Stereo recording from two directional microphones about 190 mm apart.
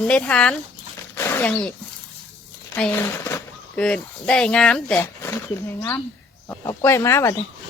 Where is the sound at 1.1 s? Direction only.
10° left (ahead or behind).